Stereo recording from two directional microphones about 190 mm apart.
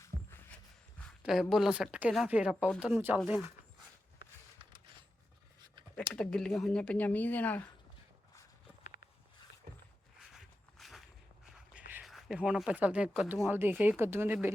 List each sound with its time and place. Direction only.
1.2 s speech: centre (ahead or behind)
6.1 s speech: 5° left (ahead or behind)
10.2 s walk: centre (ahead or behind)
11.4 s a sound: 5° right (ahead or behind)
11.9 s speech: 5° right (ahead or behind)